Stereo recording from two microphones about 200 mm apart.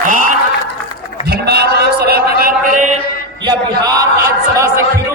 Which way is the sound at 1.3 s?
55° right (ahead or behind).